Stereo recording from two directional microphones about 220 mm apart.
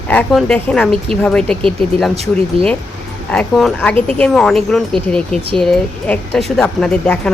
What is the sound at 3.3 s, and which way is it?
Speech, 5° left (ahead or behind).